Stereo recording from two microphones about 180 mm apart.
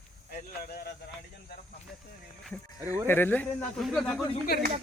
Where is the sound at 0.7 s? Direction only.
60° left (ahead or behind).